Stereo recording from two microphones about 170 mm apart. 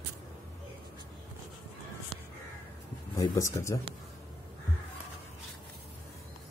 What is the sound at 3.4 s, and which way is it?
Speech, 15° left (ahead or behind).